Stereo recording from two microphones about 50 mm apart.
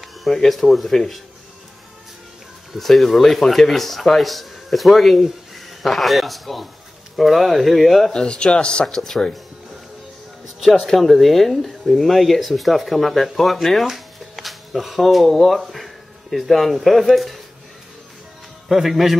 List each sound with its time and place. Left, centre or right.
0.0 s a sound: centre
0.4 s speech: centre
2.7 s speech: centre
8.1 s speech: centre
8.8 s speech: centre
10.6 s speech: centre
18.7 s speech: centre